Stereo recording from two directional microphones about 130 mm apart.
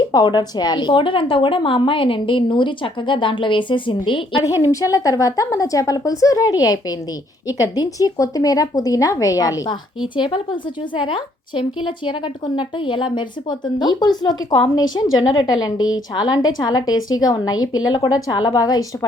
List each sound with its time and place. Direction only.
0.0 s a woman's voice: 35° left (ahead or behind)
4.6 s speech: 25° left (ahead or behind)
10.2 s a woman's voice: 40° left (ahead or behind)